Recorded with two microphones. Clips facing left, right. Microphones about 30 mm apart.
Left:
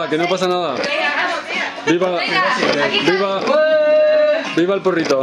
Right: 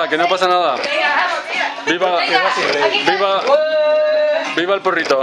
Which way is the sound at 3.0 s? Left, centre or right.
Right.